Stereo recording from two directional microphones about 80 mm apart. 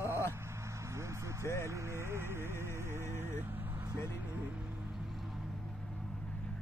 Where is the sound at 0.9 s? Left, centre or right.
Right.